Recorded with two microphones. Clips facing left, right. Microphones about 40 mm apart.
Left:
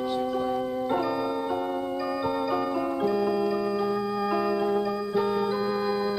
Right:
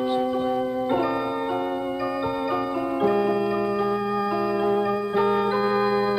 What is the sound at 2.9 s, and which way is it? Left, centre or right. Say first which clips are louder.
Music: right 6 dB; right.